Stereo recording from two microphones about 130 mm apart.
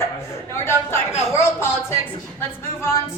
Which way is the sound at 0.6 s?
20° left (ahead or behind).